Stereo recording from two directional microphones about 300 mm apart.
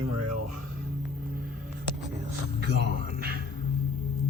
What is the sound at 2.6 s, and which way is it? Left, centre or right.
Speech, right.